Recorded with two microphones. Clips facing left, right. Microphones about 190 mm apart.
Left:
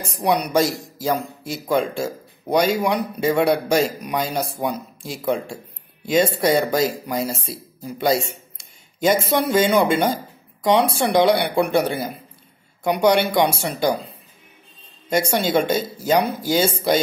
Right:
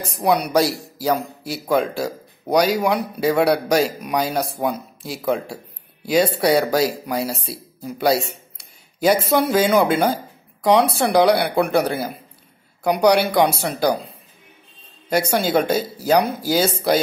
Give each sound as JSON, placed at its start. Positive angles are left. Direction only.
{"t": 0.1, "sound": "speech", "side_deg": 0}
{"t": 15.1, "sound": "speech", "side_deg": 0}